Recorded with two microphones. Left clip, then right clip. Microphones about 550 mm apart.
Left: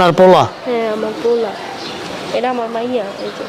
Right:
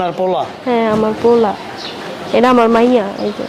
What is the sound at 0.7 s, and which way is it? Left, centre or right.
Speech, right.